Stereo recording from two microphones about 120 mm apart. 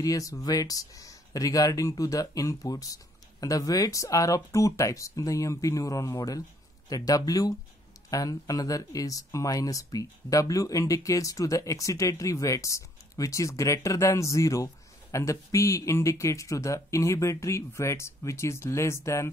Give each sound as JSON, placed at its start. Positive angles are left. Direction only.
{"t": 0.0, "sound": "speech", "side_deg": 30}